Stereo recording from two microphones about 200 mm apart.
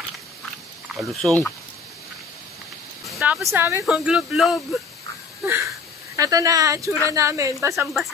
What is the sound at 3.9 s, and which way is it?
Speech, 5° right (ahead or behind).